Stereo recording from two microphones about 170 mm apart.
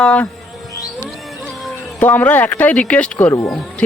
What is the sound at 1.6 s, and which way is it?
Speech, 10° left (ahead or behind).